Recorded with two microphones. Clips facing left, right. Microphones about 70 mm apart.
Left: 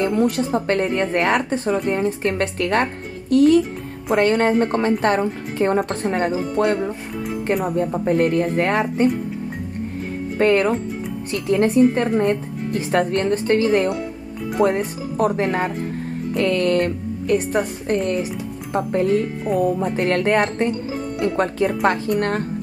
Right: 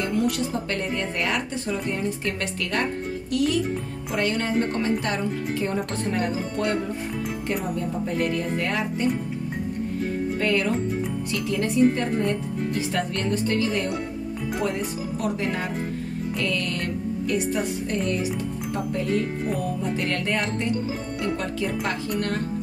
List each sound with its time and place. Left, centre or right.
0.1 s a woman's voice: left
6.0 s speech: left
6.6 s a woman's voice: left
10.4 s a woman's voice: left